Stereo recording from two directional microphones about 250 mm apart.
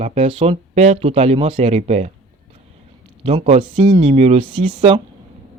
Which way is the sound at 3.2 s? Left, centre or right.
Right.